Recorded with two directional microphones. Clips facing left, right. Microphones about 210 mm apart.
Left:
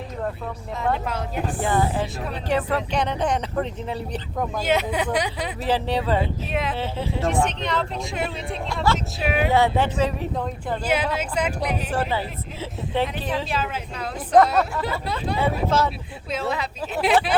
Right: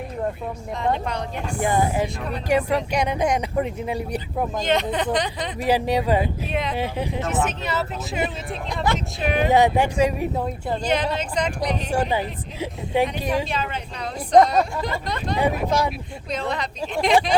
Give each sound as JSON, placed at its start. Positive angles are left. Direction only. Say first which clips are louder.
{"t": 0.8, "sound": "speech", "louder": "right 1 dB", "side_deg": 5}
{"t": 1.6, "sound": "speech", "louder": "right 3 dB", "side_deg": -15}
{"t": 4.5, "sound": "speech", "louder": "even", "side_deg": 5}
{"t": 5.5, "sound": "speech", "louder": "right 3 dB", "side_deg": -10}
{"t": 6.5, "sound": "speech", "louder": "left 2 dB", "side_deg": 0}
{"t": 6.7, "sound": "speech", "louder": "right 1 dB", "side_deg": -15}
{"t": 9.5, "sound": "speech", "louder": "right 3 dB", "side_deg": -15}
{"t": 10.8, "sound": "speech", "louder": "even", "side_deg": 5}
{"t": 11.9, "sound": "speech", "louder": "right 2 dB", "side_deg": -15}
{"t": 13.5, "sound": "speech", "louder": "even", "side_deg": 5}
{"t": 15.4, "sound": "speech", "louder": "right 1 dB", "side_deg": -15}
{"t": 16.3, "sound": "speech", "louder": "even", "side_deg": 5}